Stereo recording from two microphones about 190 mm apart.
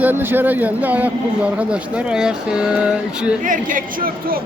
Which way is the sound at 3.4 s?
45° right (ahead or behind).